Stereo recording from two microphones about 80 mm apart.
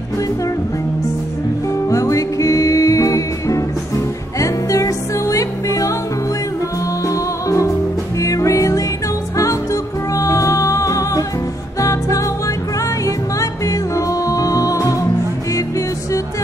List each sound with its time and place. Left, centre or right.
1.9 s music: left
7.1 s music: left